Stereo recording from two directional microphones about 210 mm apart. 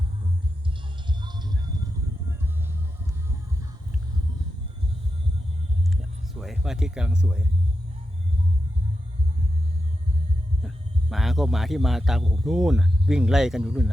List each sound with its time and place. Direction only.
1.2 s music: 20° right (ahead or behind)
6.4 s speech: centre (ahead or behind)
11.1 s speech: centre (ahead or behind)